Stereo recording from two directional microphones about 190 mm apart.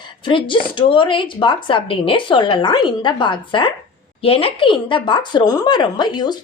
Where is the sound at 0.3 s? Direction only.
25° left (ahead or behind).